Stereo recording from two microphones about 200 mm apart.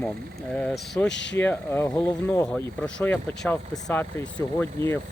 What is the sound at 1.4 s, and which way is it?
Speech, 10° left (ahead or behind).